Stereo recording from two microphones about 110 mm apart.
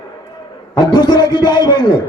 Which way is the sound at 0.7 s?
40° left (ahead or behind).